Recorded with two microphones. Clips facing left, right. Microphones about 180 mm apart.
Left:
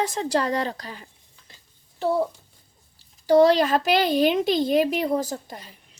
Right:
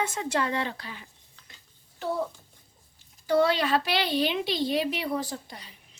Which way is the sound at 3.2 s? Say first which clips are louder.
Left 7 dB; 35° left (ahead or behind).